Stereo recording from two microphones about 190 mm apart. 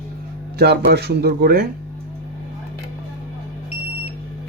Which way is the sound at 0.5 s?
55° right (ahead or behind).